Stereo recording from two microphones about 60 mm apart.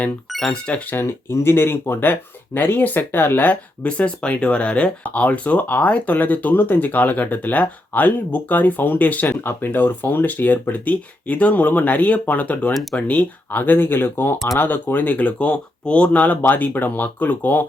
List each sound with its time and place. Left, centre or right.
0.3 s music: centre
0.9 s speech: left
12.7 s speech: centre
13.0 s speech: left